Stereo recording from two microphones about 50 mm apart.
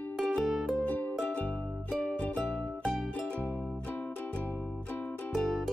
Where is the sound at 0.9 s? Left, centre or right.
Left.